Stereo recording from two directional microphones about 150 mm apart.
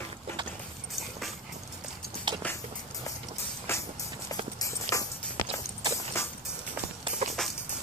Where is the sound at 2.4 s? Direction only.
10° left (ahead or behind).